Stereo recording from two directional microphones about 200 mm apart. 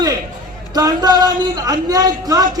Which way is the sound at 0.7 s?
20° right (ahead or behind).